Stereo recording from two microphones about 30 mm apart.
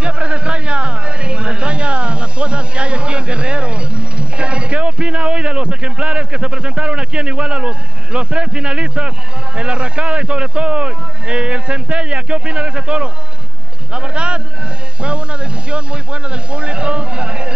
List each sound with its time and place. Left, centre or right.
0.0 s speech: right